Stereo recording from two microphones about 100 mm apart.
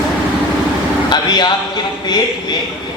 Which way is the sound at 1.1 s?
45° left (ahead or behind).